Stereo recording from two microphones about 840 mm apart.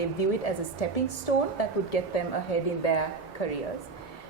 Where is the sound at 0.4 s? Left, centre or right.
Left.